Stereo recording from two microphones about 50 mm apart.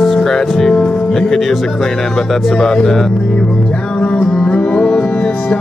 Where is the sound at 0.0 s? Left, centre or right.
Centre.